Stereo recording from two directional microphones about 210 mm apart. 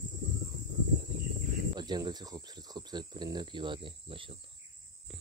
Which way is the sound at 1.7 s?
20° right (ahead or behind).